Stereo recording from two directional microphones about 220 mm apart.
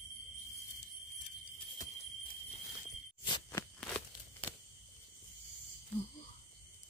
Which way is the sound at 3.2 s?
20° left (ahead or behind).